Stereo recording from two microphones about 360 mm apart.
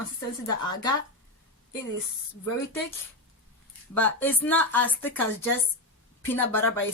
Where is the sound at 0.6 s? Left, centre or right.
Centre.